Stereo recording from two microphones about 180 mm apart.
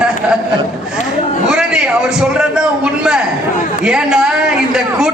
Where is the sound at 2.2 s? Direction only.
5° right (ahead or behind).